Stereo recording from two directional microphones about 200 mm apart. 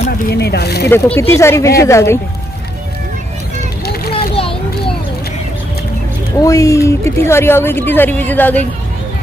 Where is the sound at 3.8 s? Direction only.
50° left (ahead or behind).